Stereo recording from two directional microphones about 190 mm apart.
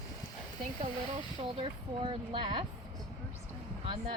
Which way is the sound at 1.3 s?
30° right (ahead or behind).